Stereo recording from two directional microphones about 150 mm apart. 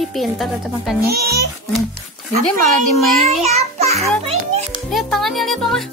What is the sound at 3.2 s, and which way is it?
Child singing, 45° right (ahead or behind).